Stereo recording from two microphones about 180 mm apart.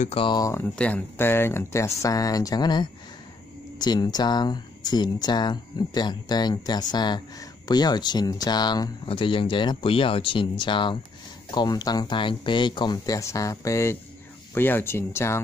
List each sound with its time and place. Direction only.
0.0 s speech: 30° left (ahead or behind); by 15.4 s 15° left (ahead or behind)